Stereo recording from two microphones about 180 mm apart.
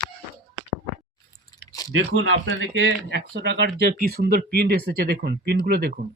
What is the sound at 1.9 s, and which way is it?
Speech, 90° right.